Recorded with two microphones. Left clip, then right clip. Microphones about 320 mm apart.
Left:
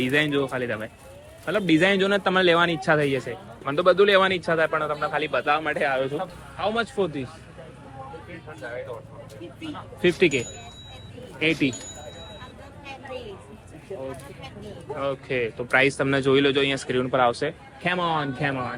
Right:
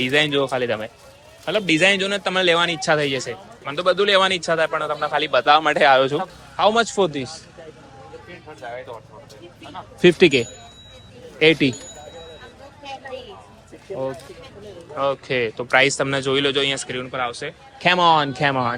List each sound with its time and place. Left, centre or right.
0.0 s a man's voice: centre
10.0 s speech: centre
11.7 s speech: centre
15.0 s a man's voice: centre
17.8 s a man's voice: centre